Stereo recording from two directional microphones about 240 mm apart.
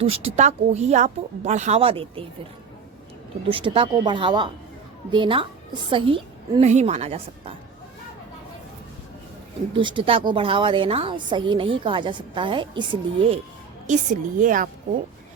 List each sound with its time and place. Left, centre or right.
0.0 s a woman's voice: right
3.5 s a woman's voice: right
9.7 s a woman's voice: right